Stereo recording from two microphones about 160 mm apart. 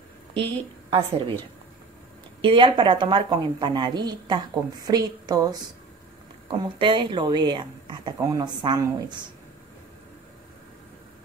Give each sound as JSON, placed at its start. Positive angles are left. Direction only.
{"t": 0.3, "sound": "a woman's voice", "side_deg": -35}
{"t": 2.4, "sound": "speech", "side_deg": -30}